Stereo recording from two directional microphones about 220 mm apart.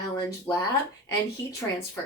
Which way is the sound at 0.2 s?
15° left (ahead or behind).